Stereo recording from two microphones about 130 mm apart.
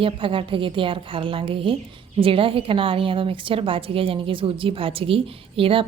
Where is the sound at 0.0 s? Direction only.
40° right (ahead or behind).